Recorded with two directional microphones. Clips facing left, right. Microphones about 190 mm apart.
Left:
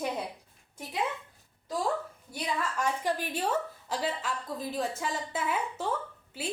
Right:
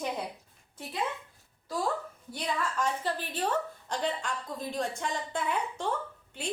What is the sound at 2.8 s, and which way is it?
A woman's voice, 10° left (ahead or behind).